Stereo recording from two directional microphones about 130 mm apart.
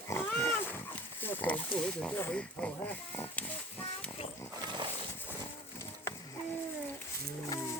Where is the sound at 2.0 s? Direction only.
10° left (ahead or behind).